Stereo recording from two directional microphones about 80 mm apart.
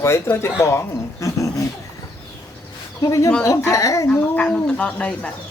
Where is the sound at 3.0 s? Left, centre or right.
Left.